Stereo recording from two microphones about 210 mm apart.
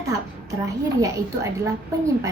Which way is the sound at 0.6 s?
15° right (ahead or behind).